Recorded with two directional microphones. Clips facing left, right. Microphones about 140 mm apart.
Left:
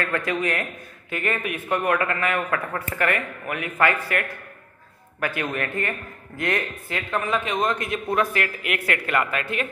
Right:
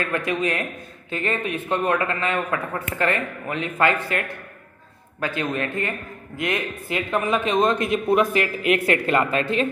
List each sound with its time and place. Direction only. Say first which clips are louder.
0.0 s a man's voice: right 1 dB; 20° right (ahead or behind)